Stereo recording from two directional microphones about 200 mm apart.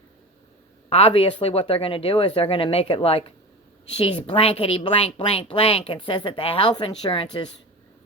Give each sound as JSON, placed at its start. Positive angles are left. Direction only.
{"t": 0.9, "sound": "a woman's voice", "side_deg": 30}